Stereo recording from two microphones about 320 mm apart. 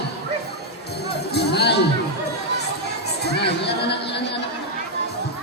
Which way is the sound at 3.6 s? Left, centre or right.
Left.